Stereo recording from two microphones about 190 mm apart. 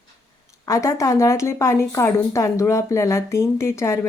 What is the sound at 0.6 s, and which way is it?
Speech, 15° left (ahead or behind).